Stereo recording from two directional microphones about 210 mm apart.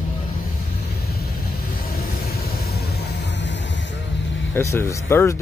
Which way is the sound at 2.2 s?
50° left (ahead or behind).